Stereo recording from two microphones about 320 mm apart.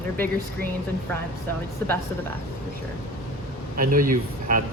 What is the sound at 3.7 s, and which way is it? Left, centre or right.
Speech, right.